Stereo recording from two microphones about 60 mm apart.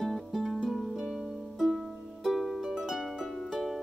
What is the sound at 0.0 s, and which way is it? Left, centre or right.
Music, centre.